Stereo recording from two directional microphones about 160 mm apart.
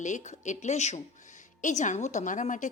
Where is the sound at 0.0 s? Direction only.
50° left (ahead or behind).